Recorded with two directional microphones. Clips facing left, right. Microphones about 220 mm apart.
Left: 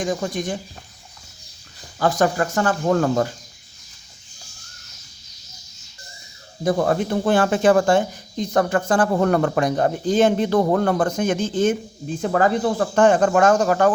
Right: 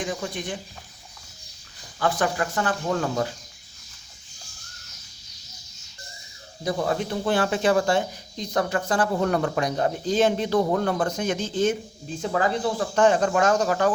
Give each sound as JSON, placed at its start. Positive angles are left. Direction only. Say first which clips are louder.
{"t": 0.0, "sound": "speech", "louder": "left 6 dB", "side_deg": 45}
{"t": 2.0, "sound": "speech", "louder": "left 5 dB", "side_deg": 40}
{"t": 6.7, "sound": "speech", "louder": "left 6 dB", "side_deg": 50}